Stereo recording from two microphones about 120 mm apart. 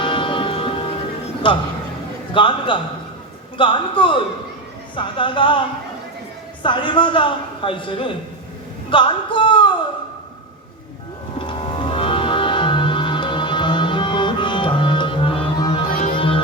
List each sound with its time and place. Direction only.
0.0 s music: 45° left (ahead or behind)
1.5 s a man's voice: 45° left (ahead or behind)
11.3 s music: 45° left (ahead or behind)